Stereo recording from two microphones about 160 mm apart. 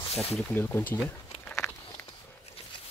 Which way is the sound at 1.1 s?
15° left (ahead or behind).